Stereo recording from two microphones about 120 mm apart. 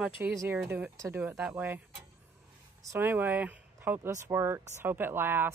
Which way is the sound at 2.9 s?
15° right (ahead or behind).